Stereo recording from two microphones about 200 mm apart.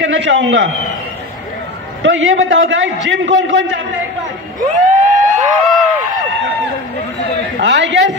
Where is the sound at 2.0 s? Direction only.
75° right (ahead or behind).